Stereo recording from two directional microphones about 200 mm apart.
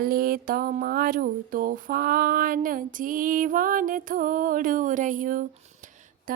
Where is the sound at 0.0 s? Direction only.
45° right (ahead or behind).